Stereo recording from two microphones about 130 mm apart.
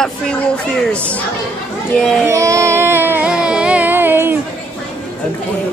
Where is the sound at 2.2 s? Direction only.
25° right (ahead or behind).